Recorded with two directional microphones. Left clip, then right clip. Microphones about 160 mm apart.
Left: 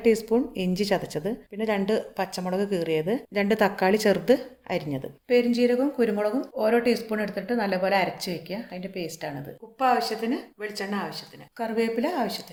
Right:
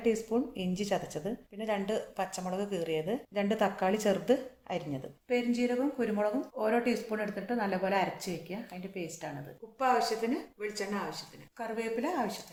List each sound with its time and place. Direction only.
0.0 s a woman's voice: 45° left (ahead or behind)
9.7 s a woman's voice: 75° left (ahead or behind)
11.5 s a woman's voice: 45° left (ahead or behind)